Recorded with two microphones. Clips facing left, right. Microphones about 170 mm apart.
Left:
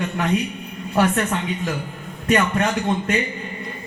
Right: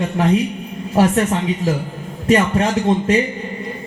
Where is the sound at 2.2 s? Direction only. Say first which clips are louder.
Right 4 dB; 30° right (ahead or behind).